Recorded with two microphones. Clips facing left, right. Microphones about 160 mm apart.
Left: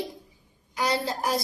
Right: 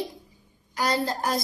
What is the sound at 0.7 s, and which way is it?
Speech, 5° left (ahead or behind).